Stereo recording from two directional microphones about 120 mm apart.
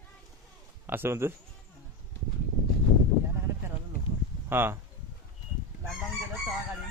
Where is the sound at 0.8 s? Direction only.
20° right (ahead or behind).